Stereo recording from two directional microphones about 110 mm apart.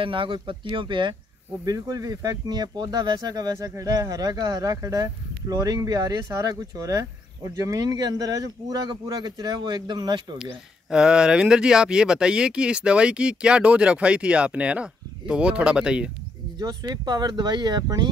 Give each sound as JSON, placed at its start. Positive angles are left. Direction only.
{"t": 0.0, "sound": "speech", "side_deg": -50}
{"t": 1.6, "sound": "speech", "side_deg": -35}
{"t": 10.4, "sound": "speech", "side_deg": -5}
{"t": 16.5, "sound": "speech", "side_deg": -40}